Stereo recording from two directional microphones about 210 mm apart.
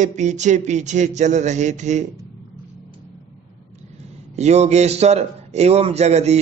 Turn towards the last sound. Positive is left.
turn(degrees=-30)  # may be behind; listen again after turning